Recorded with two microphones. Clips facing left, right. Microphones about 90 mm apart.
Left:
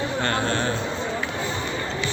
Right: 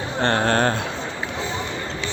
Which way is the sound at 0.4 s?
50° right (ahead or behind).